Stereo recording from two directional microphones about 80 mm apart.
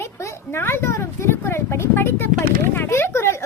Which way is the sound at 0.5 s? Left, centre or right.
Left.